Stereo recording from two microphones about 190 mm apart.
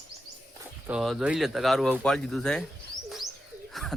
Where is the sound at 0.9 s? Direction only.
Centre (ahead or behind).